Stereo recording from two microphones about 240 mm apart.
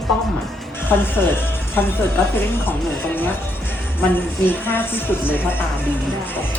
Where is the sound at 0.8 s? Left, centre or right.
Centre.